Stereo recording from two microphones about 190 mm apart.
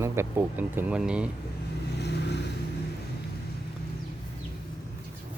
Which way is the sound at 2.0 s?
60° left (ahead or behind).